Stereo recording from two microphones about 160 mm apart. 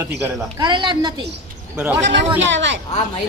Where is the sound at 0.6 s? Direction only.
30° right (ahead or behind).